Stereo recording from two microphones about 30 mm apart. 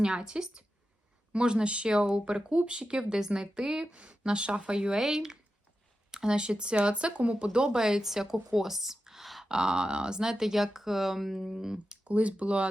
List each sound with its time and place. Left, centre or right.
0.0 s a woman's voice: right
3.1 s a woman's voice: right
3.9 s speech: right
5.0 s speech: centre
6.1 s a woman's voice: right
8.0 s speech: centre
9.5 s speech: right
10.2 s speech: centre
12.0 s speech: right